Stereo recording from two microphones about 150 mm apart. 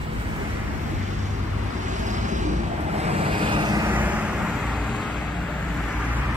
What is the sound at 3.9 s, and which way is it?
Vehicle, 10° right (ahead or behind).